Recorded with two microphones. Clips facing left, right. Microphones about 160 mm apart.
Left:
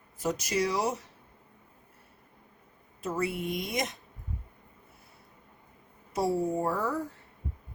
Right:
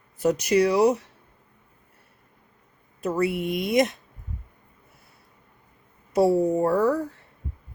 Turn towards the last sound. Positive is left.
turn(degrees=-70)  # may be behind; listen again after turning